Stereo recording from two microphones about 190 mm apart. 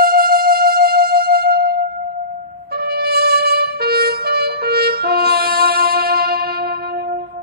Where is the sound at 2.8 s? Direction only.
55° right (ahead or behind).